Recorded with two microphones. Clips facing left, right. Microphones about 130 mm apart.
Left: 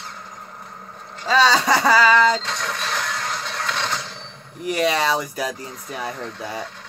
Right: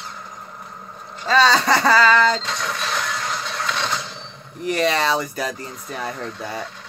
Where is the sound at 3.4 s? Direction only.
15° right (ahead or behind).